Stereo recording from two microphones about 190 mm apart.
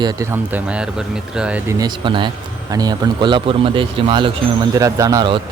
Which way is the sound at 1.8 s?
25° right (ahead or behind).